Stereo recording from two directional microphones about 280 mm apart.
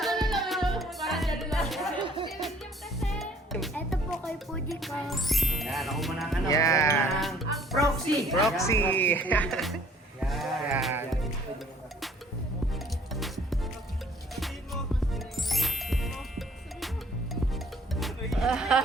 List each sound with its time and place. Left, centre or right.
0.0 s music: centre
2.0 s music: centre
3.0 s music: centre
6.5 s music: centre
7.1 s music: centre
8.6 s speech: centre
10.2 s sheep: centre
13.1 s music: centre
18.0 s music: centre